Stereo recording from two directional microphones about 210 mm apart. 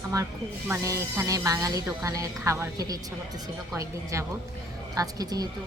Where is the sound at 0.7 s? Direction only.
15° right (ahead or behind).